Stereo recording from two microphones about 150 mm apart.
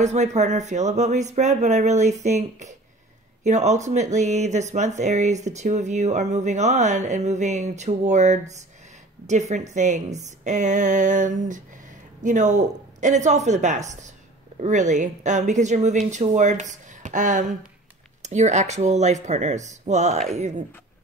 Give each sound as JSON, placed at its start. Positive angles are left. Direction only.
{"t": 0.0, "sound": "a woman's voice", "side_deg": -50}